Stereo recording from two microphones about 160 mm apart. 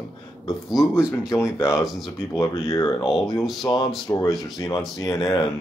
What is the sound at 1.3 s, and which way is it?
Speech, 15° left (ahead or behind).